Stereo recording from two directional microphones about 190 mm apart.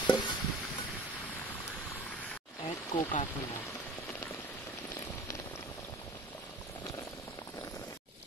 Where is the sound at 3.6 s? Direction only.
10° left (ahead or behind).